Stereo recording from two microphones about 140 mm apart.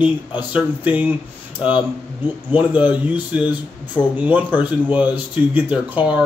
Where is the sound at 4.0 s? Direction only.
30° left (ahead or behind).